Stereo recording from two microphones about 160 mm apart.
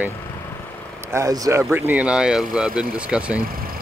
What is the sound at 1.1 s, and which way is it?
Speech, 20° right (ahead or behind).